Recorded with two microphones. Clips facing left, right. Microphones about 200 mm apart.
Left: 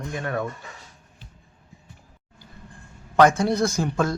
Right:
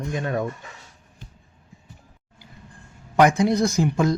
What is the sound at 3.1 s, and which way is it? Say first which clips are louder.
Speech: even; 15° right (ahead or behind).